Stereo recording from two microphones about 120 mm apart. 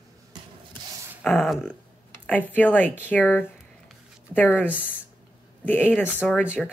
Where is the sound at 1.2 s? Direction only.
5° left (ahead or behind).